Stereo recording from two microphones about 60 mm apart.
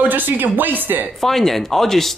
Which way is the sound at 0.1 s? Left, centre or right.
Right.